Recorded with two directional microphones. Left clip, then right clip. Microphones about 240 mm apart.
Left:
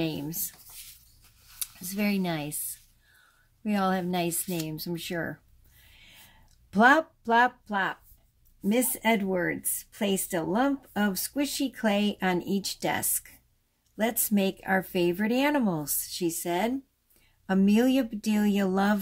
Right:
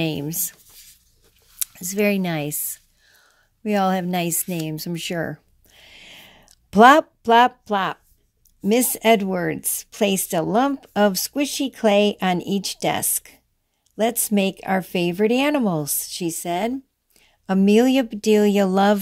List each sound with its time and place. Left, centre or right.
0.0 s speech: right
1.6 s speech: right
3.6 s speech: right
5.9 s a sound: right
8.5 s speech: right